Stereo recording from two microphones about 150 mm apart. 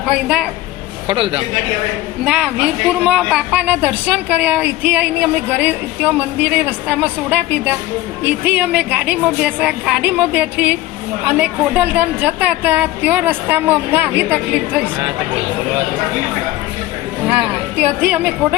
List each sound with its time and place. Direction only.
0.0 s a man's voice: 5° right (ahead or behind)
1.0 s a man's voice: 35° right (ahead or behind)
2.2 s a woman's voice: 5° right (ahead or behind)
17.4 s a woman's voice: 10° right (ahead or behind)